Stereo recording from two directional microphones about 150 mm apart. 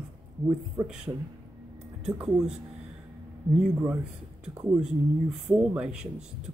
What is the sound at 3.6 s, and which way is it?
Speech, 10° right (ahead or behind).